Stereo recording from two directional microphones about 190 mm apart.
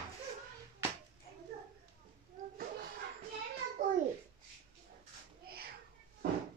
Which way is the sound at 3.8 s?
40° right (ahead or behind).